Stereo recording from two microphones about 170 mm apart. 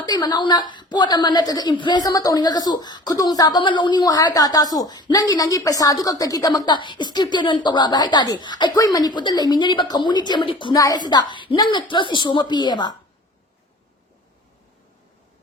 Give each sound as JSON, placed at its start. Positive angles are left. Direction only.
{"t": 0.0, "sound": "a woman's voice", "side_deg": 25}